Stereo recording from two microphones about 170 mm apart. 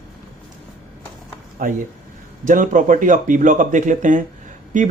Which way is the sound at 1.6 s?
55° right (ahead or behind).